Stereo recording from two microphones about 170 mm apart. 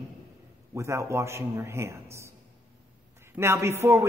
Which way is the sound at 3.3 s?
15° right (ahead or behind).